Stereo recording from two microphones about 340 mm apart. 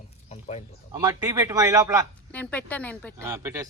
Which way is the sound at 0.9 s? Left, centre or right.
Centre.